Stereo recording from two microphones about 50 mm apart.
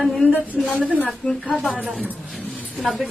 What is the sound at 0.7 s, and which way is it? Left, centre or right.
Speech, right.